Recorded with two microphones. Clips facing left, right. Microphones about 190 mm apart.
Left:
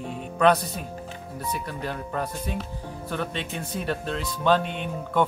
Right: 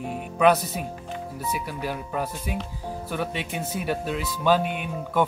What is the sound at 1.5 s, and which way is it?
Speech, 5° right (ahead or behind).